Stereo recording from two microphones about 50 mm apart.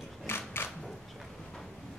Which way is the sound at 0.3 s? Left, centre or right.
Left.